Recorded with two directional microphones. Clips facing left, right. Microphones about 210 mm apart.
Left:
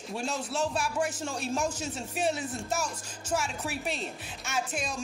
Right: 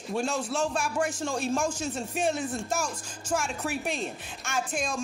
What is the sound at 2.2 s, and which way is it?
Speech, 50° right (ahead or behind).